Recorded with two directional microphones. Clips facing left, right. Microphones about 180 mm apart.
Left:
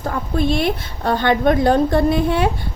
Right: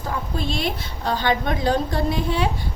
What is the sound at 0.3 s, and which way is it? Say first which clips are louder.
A woman's voice: left 9 dB; 55° left (ahead or behind).